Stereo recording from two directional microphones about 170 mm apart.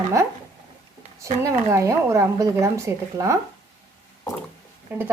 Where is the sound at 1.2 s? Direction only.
20° right (ahead or behind).